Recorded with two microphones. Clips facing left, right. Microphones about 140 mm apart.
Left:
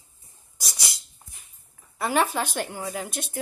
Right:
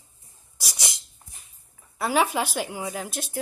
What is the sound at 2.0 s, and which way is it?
A woman's voice, centre (ahead or behind).